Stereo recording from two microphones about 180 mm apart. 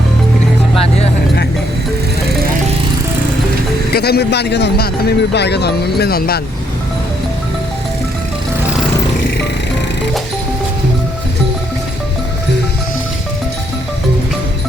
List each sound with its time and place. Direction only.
3.9 s speech: 60° left (ahead or behind)